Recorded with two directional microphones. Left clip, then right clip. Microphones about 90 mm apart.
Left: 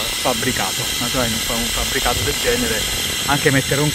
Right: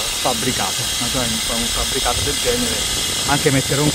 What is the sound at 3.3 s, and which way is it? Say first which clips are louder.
Speech: left 1 dB; 5° left (ahead or behind).